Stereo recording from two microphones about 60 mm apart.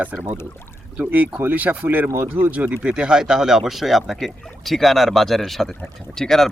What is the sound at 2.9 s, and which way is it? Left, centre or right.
Speech, centre.